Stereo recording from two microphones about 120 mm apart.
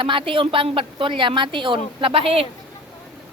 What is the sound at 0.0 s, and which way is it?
A woman's voice, 45° right (ahead or behind).